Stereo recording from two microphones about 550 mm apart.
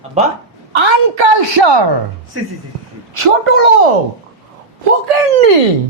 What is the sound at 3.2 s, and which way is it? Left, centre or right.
Speech, right.